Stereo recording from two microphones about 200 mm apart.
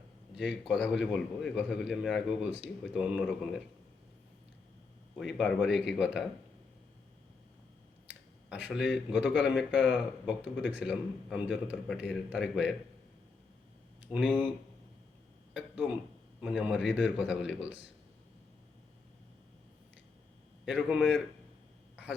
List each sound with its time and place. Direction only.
0.3 s a man's voice: centre (ahead or behind)
5.1 s a man's voice: centre (ahead or behind)
8.4 s a man's voice: 5° right (ahead or behind)
10.2 s speech: 60° left (ahead or behind)
10.8 s a man's voice: 5° right (ahead or behind)
14.1 s a man's voice: centre (ahead or behind)
15.5 s a sound: 5° right (ahead or behind)
16.4 s a man's voice: centre (ahead or behind)
20.7 s a man's voice: 5° right (ahead or behind)